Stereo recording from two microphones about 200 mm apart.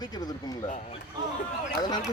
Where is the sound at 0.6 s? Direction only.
35° left (ahead or behind).